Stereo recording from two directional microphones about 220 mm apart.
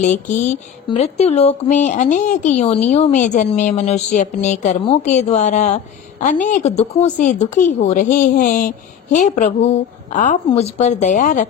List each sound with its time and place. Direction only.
0.0 s a woman's voice: 35° left (ahead or behind)